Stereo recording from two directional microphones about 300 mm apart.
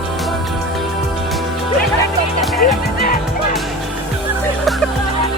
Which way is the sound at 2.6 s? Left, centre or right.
Left.